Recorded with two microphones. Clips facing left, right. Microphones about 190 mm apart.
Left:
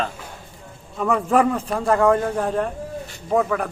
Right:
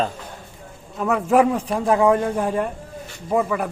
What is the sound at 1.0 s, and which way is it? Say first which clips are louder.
A man's voice: right 1 dB; 5° right (ahead or behind).